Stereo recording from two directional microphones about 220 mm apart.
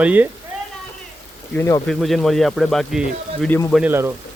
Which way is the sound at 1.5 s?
10° left (ahead or behind).